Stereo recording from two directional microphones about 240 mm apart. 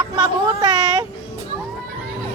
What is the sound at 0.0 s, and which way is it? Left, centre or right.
Child singing, centre.